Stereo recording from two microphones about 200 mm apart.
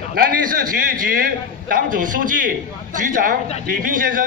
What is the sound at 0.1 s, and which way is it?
Speech, 45° right (ahead or behind).